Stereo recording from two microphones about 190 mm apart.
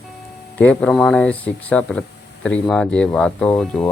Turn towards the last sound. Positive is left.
turn(degrees=5)  # may be behind; listen again after turning